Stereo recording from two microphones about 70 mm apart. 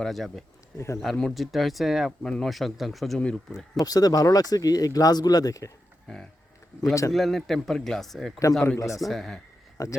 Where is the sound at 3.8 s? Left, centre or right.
Left.